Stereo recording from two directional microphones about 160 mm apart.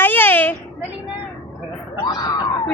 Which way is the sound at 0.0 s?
10° left (ahead or behind).